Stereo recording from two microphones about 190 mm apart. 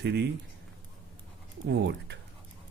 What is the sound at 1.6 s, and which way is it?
Speech, 65° right (ahead or behind).